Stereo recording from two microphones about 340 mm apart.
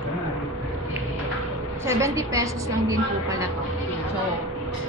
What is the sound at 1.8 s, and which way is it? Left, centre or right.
A woman's voice, centre.